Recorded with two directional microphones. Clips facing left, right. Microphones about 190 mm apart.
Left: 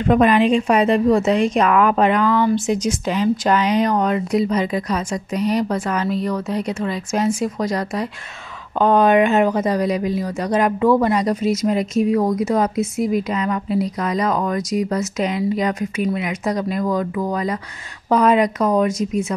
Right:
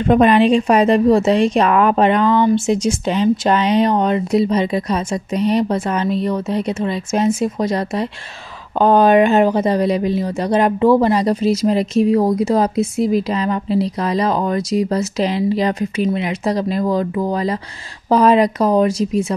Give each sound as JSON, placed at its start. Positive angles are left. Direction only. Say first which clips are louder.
{"t": 0.0, "sound": "a woman's voice", "louder": "right 3 dB", "side_deg": -30}